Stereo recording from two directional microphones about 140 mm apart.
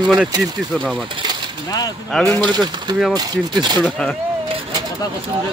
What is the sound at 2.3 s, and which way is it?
Speech, 30° right (ahead or behind).